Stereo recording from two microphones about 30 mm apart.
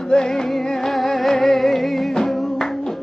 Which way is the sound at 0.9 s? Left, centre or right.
Centre.